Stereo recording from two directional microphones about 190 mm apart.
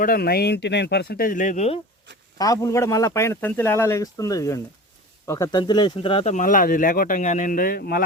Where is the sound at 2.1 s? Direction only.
70° right (ahead or behind).